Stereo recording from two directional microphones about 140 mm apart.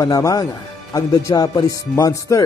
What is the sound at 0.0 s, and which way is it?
Speech, 25° left (ahead or behind).